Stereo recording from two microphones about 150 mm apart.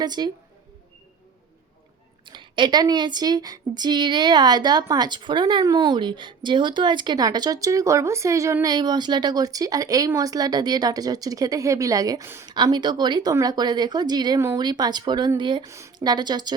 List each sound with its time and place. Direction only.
0.0 s speech: 30° right (ahead or behind)
2.2 s speech: 30° right (ahead or behind)
12.5 s speech: 30° right (ahead or behind)